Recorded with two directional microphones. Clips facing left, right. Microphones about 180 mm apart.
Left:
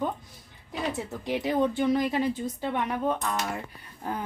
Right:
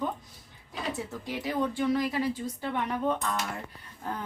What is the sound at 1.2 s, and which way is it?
Speech, 20° left (ahead or behind).